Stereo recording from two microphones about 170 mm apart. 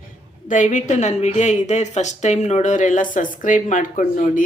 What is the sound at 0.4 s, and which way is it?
A woman's voice, 50° left (ahead or behind).